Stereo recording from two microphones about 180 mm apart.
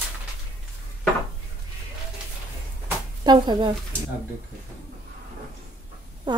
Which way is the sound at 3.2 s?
25° right (ahead or behind).